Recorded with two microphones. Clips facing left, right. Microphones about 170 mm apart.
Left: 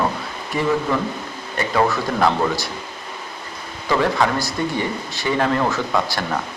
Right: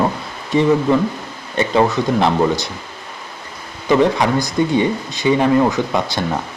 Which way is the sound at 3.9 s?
20° right (ahead or behind).